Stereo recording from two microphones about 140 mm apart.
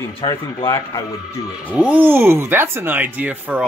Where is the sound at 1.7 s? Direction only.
10° right (ahead or behind).